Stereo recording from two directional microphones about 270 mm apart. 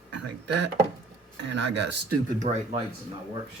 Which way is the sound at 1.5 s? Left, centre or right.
Right.